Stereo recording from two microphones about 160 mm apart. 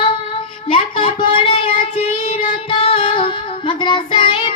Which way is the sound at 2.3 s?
35° left (ahead or behind).